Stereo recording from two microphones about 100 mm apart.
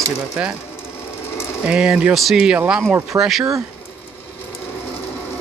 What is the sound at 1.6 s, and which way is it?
Speech, 10° right (ahead or behind).